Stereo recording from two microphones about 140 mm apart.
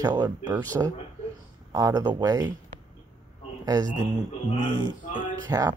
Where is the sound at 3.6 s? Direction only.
25° right (ahead or behind).